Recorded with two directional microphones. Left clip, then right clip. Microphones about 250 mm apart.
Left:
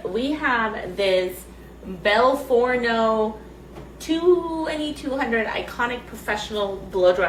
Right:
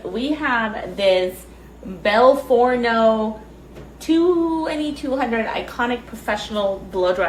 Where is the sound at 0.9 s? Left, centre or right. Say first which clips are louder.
Right 4 dB; centre.